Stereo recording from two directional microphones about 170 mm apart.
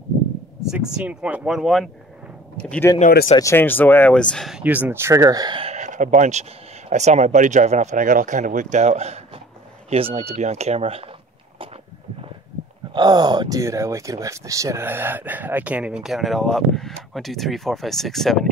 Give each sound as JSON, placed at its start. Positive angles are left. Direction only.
{"t": 0.7, "sound": "speech", "side_deg": -5}
{"t": 2.9, "sound": "speech", "side_deg": 20}
{"t": 12.9, "sound": "speech", "side_deg": -25}